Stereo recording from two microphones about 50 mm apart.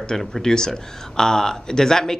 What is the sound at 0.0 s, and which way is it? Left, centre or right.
Speech, centre.